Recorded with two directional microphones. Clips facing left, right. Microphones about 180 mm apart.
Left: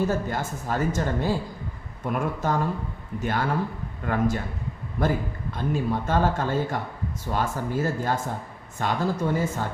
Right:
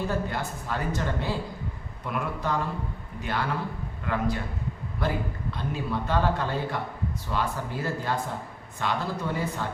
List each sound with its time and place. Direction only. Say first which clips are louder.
0.1 s a man's voice: left 3 dB; 45° left (ahead or behind)